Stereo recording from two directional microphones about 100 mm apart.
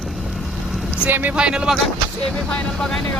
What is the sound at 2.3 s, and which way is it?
Speech, 10° left (ahead or behind).